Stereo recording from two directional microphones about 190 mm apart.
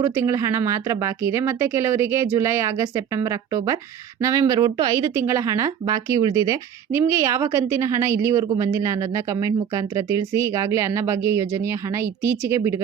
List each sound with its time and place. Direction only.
0.0 s speech: 15° right (ahead or behind)